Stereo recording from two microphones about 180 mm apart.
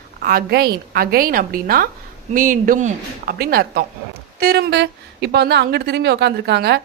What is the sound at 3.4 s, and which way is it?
A woman's voice, 60° right (ahead or behind).